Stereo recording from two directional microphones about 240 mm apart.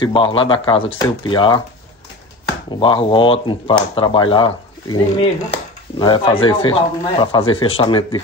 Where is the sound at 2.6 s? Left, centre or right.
Left.